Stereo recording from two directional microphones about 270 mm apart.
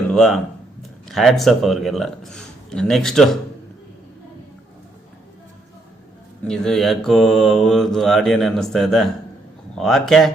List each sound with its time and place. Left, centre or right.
0.1 s speech: centre
6.4 s mantra: centre